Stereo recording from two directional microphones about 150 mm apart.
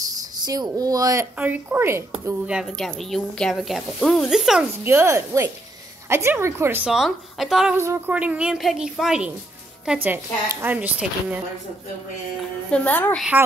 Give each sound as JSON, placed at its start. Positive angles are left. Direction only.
{"t": 0.1, "sound": "speech", "side_deg": -25}
{"t": 1.4, "sound": "a woman's voice", "side_deg": -10}
{"t": 4.8, "sound": "a woman's voice", "side_deg": -20}
{"t": 7.7, "sound": "a woman's voice", "side_deg": -20}
{"t": 12.7, "sound": "a woman's voice", "side_deg": 10}